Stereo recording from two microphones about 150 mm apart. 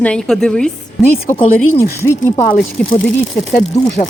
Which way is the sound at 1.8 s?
20° left (ahead or behind).